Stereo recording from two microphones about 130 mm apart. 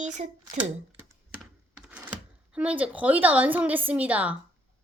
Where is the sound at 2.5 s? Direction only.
10° right (ahead or behind).